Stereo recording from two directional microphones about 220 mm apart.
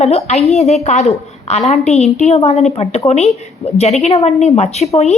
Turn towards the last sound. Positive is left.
turn(degrees=30)  # may be behind; listen again after turning